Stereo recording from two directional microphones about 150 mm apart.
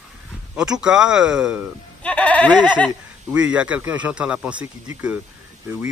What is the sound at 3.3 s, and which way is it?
Speech, 10° right (ahead or behind).